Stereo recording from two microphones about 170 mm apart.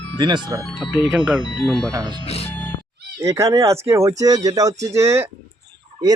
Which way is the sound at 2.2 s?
35° left (ahead or behind).